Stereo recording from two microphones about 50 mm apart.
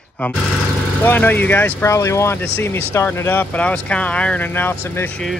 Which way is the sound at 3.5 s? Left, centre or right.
Left.